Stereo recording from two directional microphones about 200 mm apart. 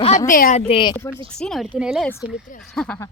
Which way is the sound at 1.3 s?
5° left (ahead or behind).